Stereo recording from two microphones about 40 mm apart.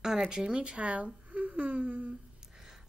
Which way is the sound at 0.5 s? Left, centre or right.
Right.